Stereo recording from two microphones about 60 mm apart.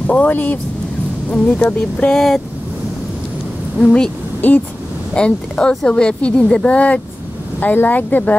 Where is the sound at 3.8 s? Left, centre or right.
Centre.